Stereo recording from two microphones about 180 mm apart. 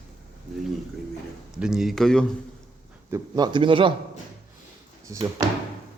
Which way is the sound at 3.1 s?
25° right (ahead or behind).